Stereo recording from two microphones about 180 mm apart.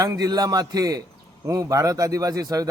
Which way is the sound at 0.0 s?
20° right (ahead or behind).